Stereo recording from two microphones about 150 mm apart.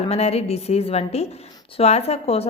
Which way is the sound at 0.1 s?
45° left (ahead or behind).